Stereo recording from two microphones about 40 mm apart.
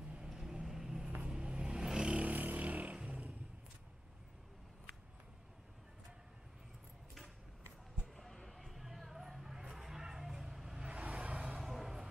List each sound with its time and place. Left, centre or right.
0.2 s vehicle: centre
1.2 s vehicle: right
2.0 s vehicle: right
3.1 s a sound: right
8.2 s music: centre
11.0 s vehicle: right
11.6 s vehicle: centre